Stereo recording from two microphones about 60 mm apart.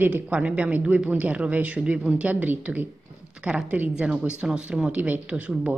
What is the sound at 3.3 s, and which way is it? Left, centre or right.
Speech, centre.